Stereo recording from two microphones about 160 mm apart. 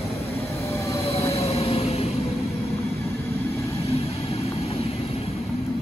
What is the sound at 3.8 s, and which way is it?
Vehicle, 40° left (ahead or behind).